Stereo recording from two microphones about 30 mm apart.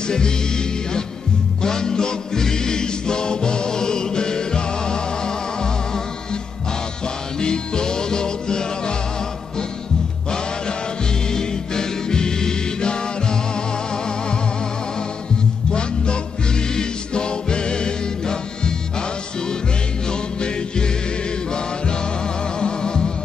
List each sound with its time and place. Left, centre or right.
0.0 s music: left
1.6 s music: left
7.3 s music: left
11.2 s music: left
15.7 s music: left
20.1 s music: left
22.6 s music: left